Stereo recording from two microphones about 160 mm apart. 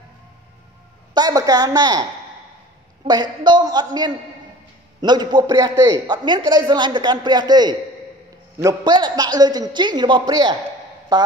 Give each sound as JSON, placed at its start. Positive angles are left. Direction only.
{"t": 1.1, "sound": "a man's voice", "side_deg": -25}
{"t": 3.1, "sound": "a man's voice", "side_deg": -25}